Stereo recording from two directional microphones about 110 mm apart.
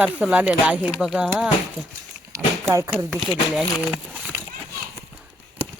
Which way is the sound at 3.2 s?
5° right (ahead or behind).